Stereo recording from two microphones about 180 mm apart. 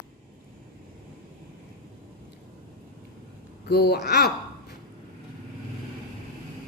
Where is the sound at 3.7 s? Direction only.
60° left (ahead or behind).